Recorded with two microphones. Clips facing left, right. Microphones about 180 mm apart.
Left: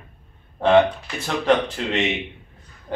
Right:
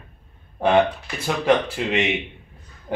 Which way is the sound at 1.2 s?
10° right (ahead or behind).